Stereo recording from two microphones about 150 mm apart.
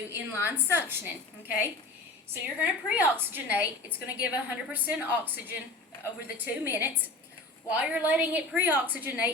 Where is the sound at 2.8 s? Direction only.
15° right (ahead or behind).